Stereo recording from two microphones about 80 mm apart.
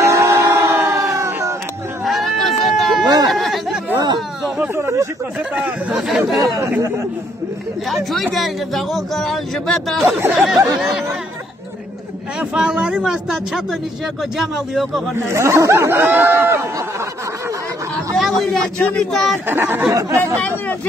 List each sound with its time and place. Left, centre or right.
0.0 s a sound: right
2.0 s a sound: centre
4.7 s speech: right
5.5 s speech: centre
6.0 s speech: centre
7.9 s speech: centre
12.4 s speech: centre
15.2 s speech: right
18.1 s a sound: centre
18.8 s speech: centre
19.1 s speech: centre
19.4 s speech: right
19.9 s speech: right